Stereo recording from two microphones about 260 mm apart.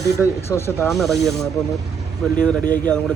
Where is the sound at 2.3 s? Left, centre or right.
Centre.